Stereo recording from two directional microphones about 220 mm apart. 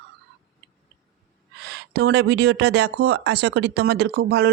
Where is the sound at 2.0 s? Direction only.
70° right (ahead or behind).